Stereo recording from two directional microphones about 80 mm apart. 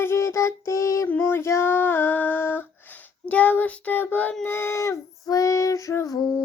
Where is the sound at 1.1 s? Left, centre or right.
Left.